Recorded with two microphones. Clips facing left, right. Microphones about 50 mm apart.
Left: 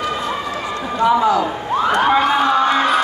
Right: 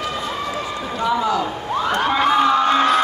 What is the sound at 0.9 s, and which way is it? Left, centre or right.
Speech, centre.